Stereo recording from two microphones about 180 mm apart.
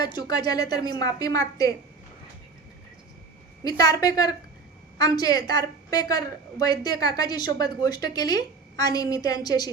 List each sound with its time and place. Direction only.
0.0 s a woman's voice: 20° left (ahead or behind)
3.6 s a woman's voice: 20° left (ahead or behind)